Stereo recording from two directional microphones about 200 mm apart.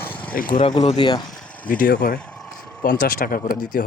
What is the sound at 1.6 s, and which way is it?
Speech, 45° left (ahead or behind).